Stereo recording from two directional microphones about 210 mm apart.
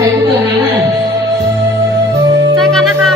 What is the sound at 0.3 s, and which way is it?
Music, 10° right (ahead or behind).